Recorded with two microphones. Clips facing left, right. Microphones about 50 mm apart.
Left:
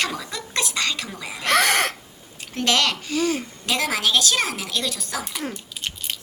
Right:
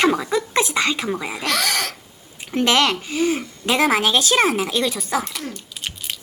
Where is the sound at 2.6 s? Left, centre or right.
Centre.